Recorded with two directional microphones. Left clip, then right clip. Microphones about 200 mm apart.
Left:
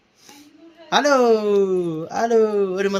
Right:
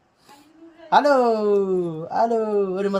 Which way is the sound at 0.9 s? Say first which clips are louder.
Right 1 dB; 25° left (ahead or behind).